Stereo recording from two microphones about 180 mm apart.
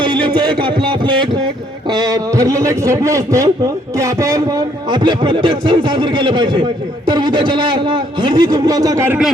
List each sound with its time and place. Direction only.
0.0 s a man's voice: 25° right (ahead or behind)